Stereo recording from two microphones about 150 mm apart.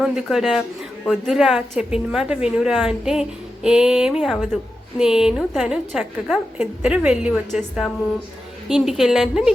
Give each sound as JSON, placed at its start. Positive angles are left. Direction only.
{"t": 0.0, "sound": "a woman's voice", "side_deg": 0}